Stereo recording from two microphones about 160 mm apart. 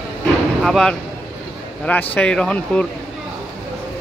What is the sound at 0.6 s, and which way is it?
A man's voice, centre (ahead or behind).